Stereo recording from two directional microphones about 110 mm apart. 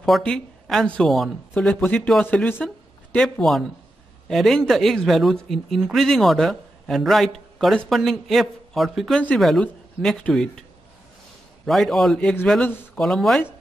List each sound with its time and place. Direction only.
0.0 s a man's voice: 5° left (ahead or behind)
2.2 s speech: 15° left (ahead or behind)
3.2 s a man's voice: centre (ahead or behind)
11.6 s a man's voice: centre (ahead or behind)